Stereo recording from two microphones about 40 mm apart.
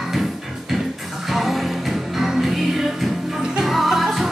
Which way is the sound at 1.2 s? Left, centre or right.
Centre.